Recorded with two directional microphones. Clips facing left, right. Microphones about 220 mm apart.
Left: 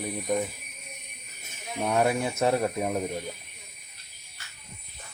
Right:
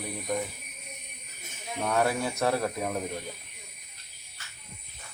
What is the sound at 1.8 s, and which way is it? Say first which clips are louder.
Speech: left 2 dB; 20° left (ahead or behind).